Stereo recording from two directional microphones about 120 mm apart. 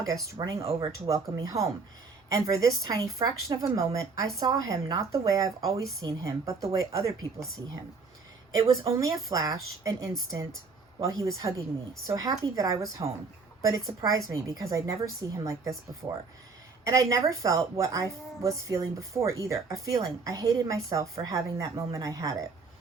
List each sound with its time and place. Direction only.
0.6 s speech: 55° right (ahead or behind)
0.9 s a woman's voice: 25° right (ahead or behind)
7.3 s speech: centre (ahead or behind)
9.0 s a woman's voice: 30° right (ahead or behind)